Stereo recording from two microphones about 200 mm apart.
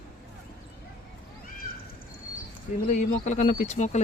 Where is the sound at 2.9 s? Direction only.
35° left (ahead or behind).